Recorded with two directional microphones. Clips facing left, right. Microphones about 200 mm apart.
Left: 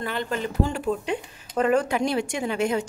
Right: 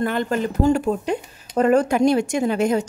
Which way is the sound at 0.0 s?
50° right (ahead or behind).